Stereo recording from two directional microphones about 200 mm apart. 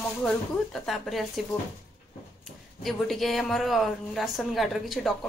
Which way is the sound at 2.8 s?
Centre (ahead or behind).